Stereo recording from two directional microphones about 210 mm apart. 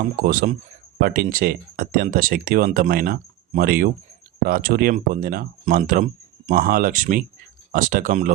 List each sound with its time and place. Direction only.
0.2 s speech: 40° right (ahead or behind)